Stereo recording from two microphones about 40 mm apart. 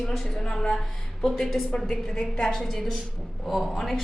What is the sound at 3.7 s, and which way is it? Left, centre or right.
Speech, centre.